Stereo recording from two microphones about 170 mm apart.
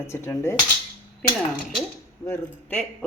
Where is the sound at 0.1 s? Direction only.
15° left (ahead or behind).